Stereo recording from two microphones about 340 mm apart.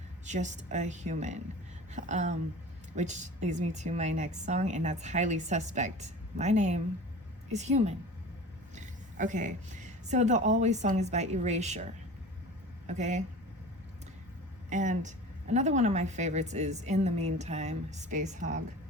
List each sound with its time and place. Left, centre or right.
0.3 s a woman's voice: right
12.9 s a woman's voice: right
14.7 s a woman's voice: right